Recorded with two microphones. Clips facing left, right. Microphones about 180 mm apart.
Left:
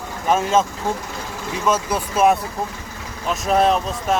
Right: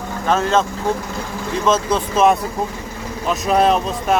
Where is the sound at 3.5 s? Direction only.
Centre (ahead or behind).